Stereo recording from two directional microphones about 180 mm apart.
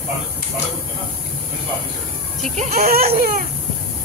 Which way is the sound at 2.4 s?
50° right (ahead or behind).